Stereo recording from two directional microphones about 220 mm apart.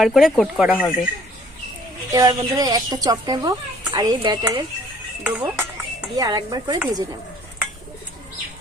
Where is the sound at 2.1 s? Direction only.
15° right (ahead or behind).